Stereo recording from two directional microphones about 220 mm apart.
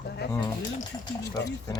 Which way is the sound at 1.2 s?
15° left (ahead or behind).